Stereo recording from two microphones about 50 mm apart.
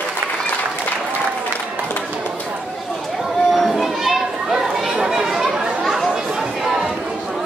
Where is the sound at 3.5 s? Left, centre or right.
Centre.